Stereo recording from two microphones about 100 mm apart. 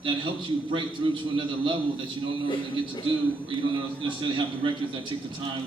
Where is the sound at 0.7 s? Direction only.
55° right (ahead or behind).